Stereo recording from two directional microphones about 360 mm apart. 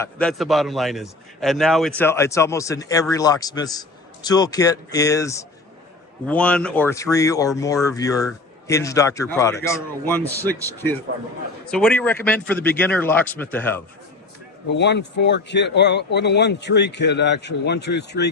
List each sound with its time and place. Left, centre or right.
0.0 s a man's voice: centre
11.6 s speech: centre
14.7 s a man's voice: left